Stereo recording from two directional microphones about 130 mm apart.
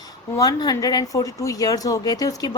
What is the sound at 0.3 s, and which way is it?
A woman's voice, 30° left (ahead or behind).